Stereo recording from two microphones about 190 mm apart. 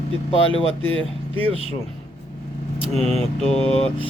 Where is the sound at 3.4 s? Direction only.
30° left (ahead or behind).